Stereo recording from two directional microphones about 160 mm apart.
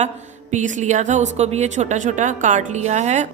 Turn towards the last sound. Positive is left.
turn(degrees=-45)  # may be behind; listen again after turning